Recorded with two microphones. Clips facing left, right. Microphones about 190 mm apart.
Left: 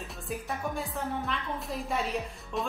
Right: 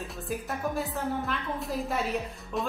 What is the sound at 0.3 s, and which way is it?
A woman's voice, centre (ahead or behind).